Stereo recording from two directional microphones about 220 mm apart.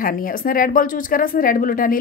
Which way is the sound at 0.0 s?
40° left (ahead or behind).